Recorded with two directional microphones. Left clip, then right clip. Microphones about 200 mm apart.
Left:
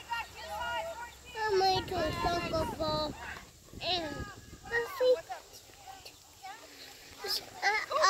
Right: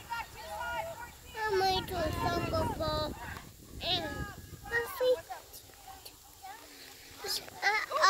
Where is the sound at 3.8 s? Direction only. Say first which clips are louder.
Even; 20° left (ahead or behind).